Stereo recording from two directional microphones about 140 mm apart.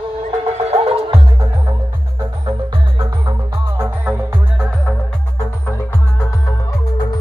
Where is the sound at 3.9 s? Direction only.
10° right (ahead or behind).